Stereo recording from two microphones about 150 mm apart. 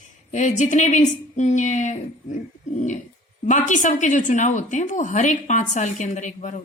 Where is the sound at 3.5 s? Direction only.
55° left (ahead or behind).